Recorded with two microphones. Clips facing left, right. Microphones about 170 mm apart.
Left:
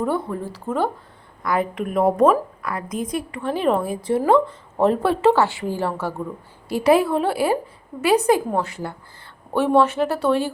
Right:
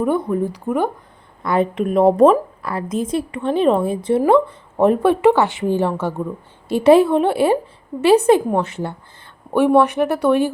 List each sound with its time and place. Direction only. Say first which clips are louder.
0.0 s a woman's voice: right 5 dB; 15° right (ahead or behind)